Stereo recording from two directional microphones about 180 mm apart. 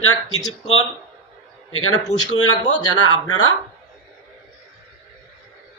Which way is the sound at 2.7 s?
25° left (ahead or behind).